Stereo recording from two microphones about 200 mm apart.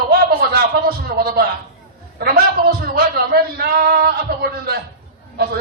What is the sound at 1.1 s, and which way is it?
Speech, 50° right (ahead or behind).